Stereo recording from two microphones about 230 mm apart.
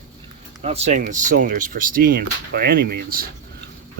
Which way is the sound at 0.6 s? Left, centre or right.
Right.